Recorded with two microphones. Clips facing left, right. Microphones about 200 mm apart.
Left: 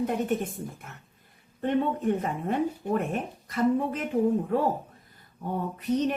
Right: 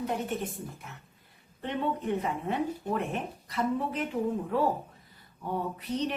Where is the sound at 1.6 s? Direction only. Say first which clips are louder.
Left 6 dB; 50° left (ahead or behind).